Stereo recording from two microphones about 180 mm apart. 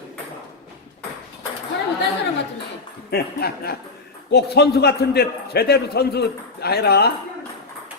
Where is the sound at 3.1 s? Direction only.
60° left (ahead or behind).